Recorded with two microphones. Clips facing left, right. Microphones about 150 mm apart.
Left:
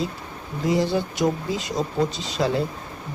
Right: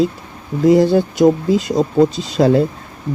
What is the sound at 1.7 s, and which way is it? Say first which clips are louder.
Speech: right 8 dB; 35° right (ahead or behind).